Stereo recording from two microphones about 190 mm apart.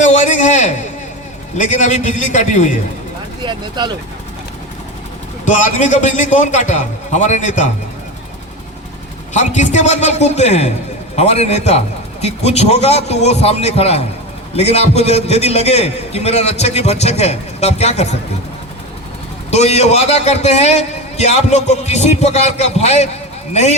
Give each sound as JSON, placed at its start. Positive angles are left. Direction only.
{"t": 0.0, "sound": "a man's voice", "side_deg": 40}
{"t": 3.4, "sound": "speech", "side_deg": -25}
{"t": 5.5, "sound": "a man's voice", "side_deg": 40}
{"t": 9.3, "sound": "a man's voice", "side_deg": 40}
{"t": 19.5, "sound": "a man's voice", "side_deg": 35}